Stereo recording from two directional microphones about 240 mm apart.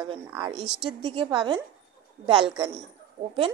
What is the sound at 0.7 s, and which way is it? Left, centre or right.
Speech, centre.